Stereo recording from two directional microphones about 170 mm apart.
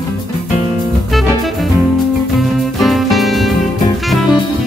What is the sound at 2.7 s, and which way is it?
Music, centre (ahead or behind).